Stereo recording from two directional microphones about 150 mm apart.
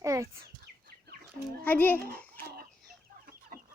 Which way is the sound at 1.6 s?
10° left (ahead or behind).